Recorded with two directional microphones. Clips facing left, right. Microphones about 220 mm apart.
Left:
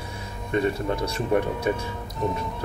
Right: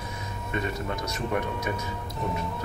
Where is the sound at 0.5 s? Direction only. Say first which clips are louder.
Left 7 dB; 30° left (ahead or behind).